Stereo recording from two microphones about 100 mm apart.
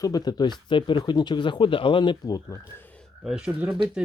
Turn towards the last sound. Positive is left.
turn(degrees=-10)  # may be behind; listen again after turning